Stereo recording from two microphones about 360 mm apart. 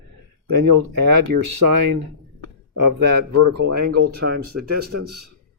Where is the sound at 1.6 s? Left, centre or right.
Right.